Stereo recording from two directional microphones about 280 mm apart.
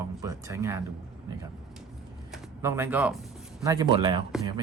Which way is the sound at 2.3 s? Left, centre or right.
Centre.